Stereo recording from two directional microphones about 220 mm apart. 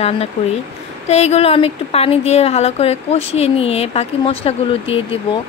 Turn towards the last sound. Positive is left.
turn(degrees=25)  # may be behind; listen again after turning